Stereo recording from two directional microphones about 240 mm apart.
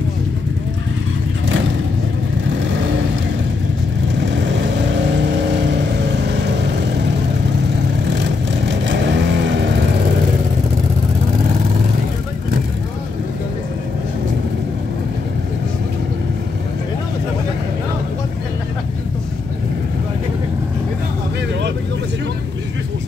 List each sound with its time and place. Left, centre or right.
4.2 s vehicle: right
8.2 s vehicle: right